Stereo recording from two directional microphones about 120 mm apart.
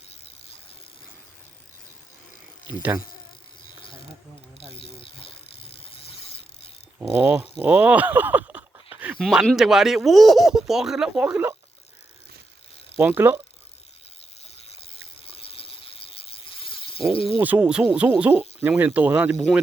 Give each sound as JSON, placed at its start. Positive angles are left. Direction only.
{"t": 2.6, "sound": "insect", "side_deg": -15}
{"t": 5.5, "sound": "vehicle", "side_deg": 50}
{"t": 7.0, "sound": "speech", "side_deg": -15}
{"t": 7.6, "sound": "a sound", "side_deg": -15}
{"t": 9.1, "sound": "speech", "side_deg": 0}
{"t": 13.0, "sound": "speech", "side_deg": -15}
{"t": 14.4, "sound": "a sound", "side_deg": 60}
{"t": 17.4, "sound": "speech", "side_deg": -10}